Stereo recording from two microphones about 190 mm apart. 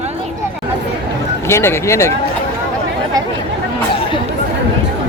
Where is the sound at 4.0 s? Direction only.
25° left (ahead or behind).